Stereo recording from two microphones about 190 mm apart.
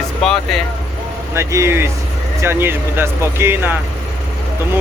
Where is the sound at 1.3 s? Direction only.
15° right (ahead or behind).